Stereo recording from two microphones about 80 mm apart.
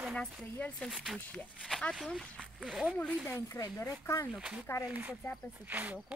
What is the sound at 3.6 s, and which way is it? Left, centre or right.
Speech, left.